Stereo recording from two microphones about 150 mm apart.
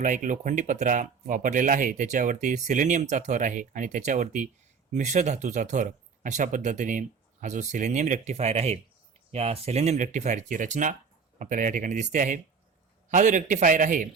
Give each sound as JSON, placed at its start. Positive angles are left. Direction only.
{"t": 0.0, "sound": "speech", "side_deg": -60}